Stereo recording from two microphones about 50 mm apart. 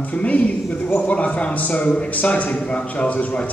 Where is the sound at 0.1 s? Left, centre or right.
Left.